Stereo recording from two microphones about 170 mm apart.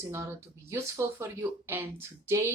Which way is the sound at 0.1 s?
15° right (ahead or behind).